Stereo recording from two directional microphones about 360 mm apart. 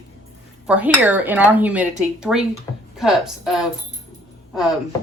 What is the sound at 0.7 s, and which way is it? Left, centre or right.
A woman's voice, centre.